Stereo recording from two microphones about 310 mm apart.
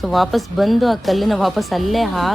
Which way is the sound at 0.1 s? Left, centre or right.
Centre.